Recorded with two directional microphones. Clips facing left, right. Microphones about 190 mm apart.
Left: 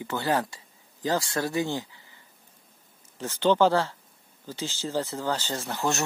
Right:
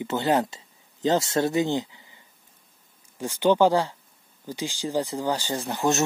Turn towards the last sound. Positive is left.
turn(degrees=-20)  # may be behind; listen again after turning